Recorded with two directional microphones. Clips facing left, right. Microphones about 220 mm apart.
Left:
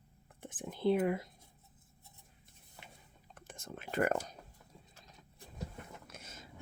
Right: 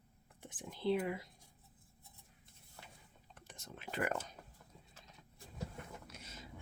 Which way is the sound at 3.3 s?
50° left (ahead or behind).